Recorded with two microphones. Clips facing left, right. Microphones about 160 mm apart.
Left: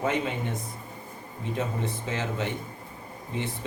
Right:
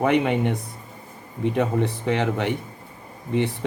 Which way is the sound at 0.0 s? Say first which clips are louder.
Right 8 dB; 65° right (ahead or behind).